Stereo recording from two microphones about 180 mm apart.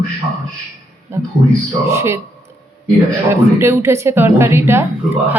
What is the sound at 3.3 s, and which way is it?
Speech, 15° right (ahead or behind).